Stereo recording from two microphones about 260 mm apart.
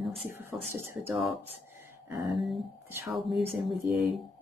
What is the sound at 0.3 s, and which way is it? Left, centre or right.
Speech, centre.